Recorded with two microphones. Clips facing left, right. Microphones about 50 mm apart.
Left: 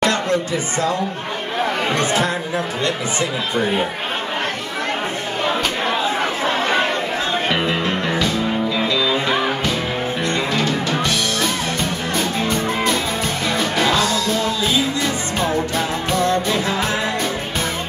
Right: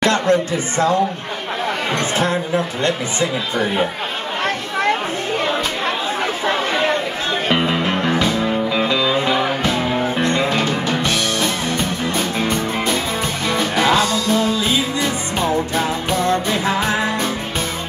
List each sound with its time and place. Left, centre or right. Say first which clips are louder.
0.0 s speech: right 3 dB; right
2.1 s speech: right 2 dB; right
8.7 s music: right 2 dB; right
10.5 s music: right 1 dB; centre
13.5 s music: right 3 dB; centre
16.4 s music: right 1 dB; right